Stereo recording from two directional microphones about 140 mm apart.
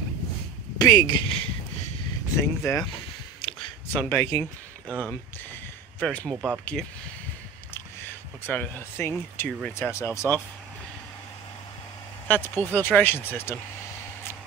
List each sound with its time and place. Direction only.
0.7 s speech: 25° left (ahead or behind)
2.3 s speech: 20° left (ahead or behind)
3.3 s a sound: 40° left (ahead or behind)
3.9 s speech: 15° left (ahead or behind)
4.8 s a sound: 10° left (ahead or behind)
6.0 s speech: 5° left (ahead or behind)
8.5 s speech: 15° left (ahead or behind)
12.3 s speech: 15° left (ahead or behind)